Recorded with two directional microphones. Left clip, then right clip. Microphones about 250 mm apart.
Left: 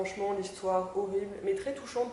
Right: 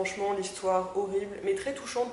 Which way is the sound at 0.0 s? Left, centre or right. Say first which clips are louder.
Right 3 dB; centre.